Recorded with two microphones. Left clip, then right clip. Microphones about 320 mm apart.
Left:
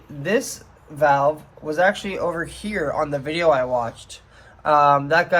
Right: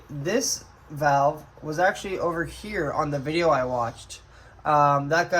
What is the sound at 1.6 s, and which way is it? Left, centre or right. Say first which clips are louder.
Speech: left 4 dB; left.